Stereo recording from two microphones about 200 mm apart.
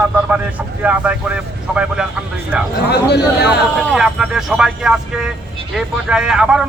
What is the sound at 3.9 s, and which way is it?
Speech, 5° right (ahead or behind).